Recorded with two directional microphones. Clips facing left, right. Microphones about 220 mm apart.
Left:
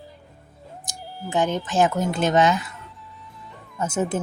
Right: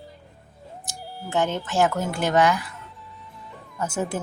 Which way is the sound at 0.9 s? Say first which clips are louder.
Left 1 dB; 15° left (ahead or behind).